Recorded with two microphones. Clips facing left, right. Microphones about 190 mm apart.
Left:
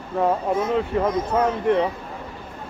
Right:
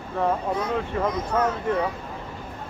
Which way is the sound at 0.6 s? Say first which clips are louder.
Left 4 dB; 25° left (ahead or behind).